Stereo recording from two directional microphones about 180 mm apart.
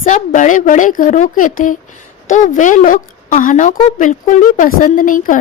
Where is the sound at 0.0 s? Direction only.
45° left (ahead or behind).